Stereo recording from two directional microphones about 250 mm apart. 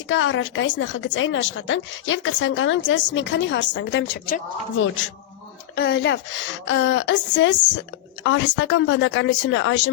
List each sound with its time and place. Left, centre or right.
0.1 s a woman's voice: left
5.7 s a woman's voice: left